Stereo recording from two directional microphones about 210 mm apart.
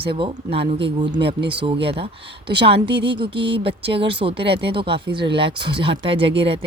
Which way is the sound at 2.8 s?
50° right (ahead or behind).